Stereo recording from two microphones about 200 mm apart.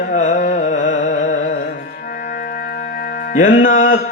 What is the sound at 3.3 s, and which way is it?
Music, 40° left (ahead or behind).